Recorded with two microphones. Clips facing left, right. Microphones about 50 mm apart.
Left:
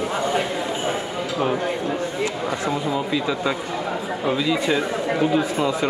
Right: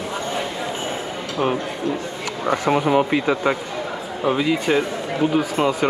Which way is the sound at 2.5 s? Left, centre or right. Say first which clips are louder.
Right 5 dB; right.